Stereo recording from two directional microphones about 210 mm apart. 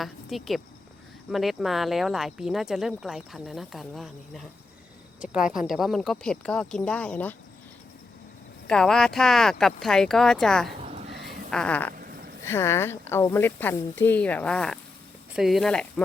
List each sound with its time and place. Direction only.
0.0 s speech: centre (ahead or behind)
8.6 s speech: 5° left (ahead or behind)
11.9 s a sound: 45° right (ahead or behind)
12.5 s speech: 10° left (ahead or behind)